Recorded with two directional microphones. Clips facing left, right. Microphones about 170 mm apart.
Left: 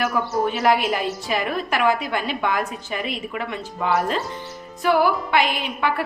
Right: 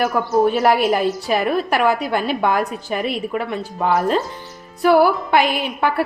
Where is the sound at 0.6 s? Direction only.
45° right (ahead or behind).